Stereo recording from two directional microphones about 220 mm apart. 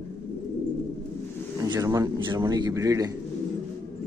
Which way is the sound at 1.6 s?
15° right (ahead or behind).